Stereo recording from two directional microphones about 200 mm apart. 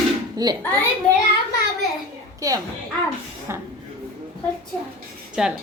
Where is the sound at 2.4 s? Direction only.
15° right (ahead or behind).